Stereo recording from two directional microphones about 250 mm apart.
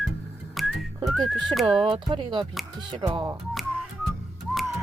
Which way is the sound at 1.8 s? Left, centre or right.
Centre.